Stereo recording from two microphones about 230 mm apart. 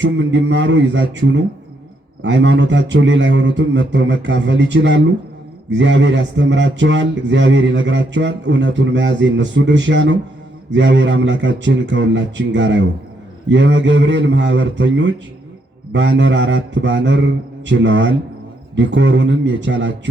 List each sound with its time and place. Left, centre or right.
0.0 s speech: right